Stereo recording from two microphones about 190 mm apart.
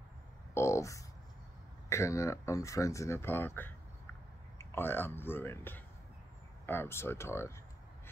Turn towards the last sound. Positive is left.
turn(degrees=15)  # may be behind; listen again after turning